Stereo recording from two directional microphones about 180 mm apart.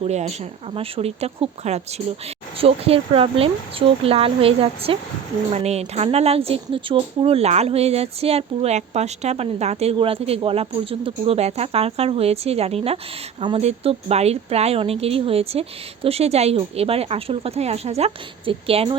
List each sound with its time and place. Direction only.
0.0 s speech: 40° right (ahead or behind)